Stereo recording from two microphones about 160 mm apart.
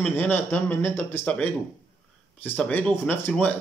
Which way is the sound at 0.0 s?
10° left (ahead or behind).